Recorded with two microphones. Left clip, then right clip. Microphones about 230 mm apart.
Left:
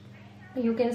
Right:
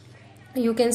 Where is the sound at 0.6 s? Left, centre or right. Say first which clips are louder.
Right 5 dB; right.